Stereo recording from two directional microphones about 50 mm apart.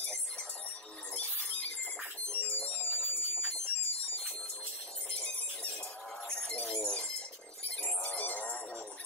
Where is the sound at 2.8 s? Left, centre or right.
Left.